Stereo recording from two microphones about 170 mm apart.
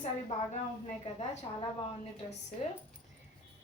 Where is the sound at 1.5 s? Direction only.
30° left (ahead or behind).